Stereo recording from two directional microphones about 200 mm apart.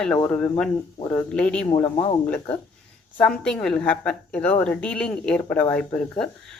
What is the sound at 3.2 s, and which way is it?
A woman's voice, 5° left (ahead or behind).